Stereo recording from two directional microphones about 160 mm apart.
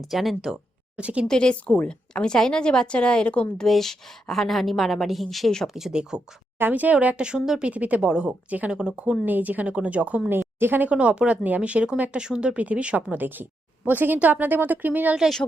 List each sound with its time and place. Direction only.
0.1 s speech: centre (ahead or behind)
1.3 s a woman's voice: 5° left (ahead or behind)